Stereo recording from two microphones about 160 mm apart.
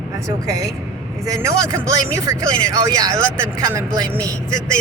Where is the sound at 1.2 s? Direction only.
20° right (ahead or behind).